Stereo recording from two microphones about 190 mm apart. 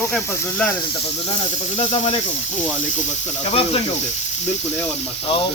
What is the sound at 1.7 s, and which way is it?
Speech, 30° left (ahead or behind).